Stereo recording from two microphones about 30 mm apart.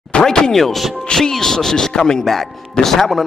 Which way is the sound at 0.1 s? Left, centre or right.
Left.